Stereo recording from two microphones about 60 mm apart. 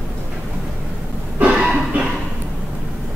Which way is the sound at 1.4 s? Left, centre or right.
Centre.